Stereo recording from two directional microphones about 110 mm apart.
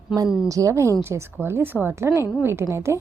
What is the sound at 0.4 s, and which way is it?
A woman's voice, 30° right (ahead or behind).